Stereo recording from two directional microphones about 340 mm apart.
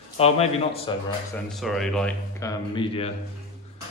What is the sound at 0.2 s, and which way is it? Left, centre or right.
Speech, centre.